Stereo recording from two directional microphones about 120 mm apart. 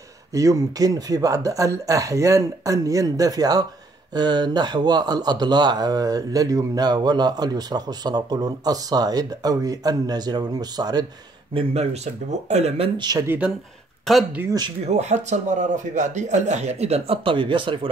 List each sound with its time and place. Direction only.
0.3 s speech: 30° right (ahead or behind)
11.5 s speech: 60° right (ahead or behind)
14.1 s speech: 5° left (ahead or behind)
14.9 s a man's voice: 70° right (ahead or behind); by 17.7 s 45° right (ahead or behind)